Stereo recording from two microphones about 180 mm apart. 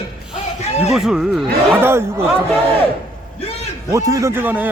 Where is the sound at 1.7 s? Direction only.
15° right (ahead or behind).